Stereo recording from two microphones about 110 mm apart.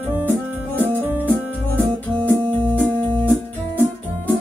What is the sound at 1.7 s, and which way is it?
Music, 15° left (ahead or behind).